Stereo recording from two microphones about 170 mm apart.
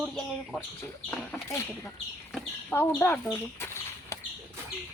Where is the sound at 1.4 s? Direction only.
15° left (ahead or behind).